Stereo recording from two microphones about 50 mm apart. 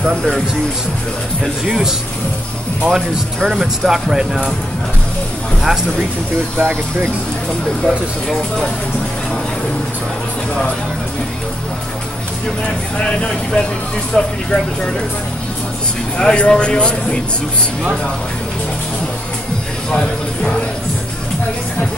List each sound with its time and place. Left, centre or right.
1.4 s speech: centre
5.6 s speech: centre
6.6 s speech: right
7.8 s speech: centre
12.6 s speech: left
16.2 s speech: centre